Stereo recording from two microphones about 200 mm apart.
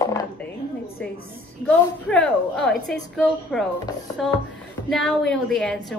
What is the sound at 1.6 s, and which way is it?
A woman's voice, 5° left (ahead or behind).